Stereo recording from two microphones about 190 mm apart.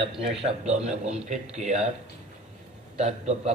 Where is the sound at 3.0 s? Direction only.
35° right (ahead or behind).